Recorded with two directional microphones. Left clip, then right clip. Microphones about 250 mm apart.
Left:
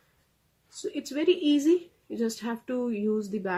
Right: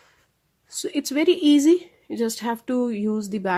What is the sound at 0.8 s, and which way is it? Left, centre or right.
Speech, right.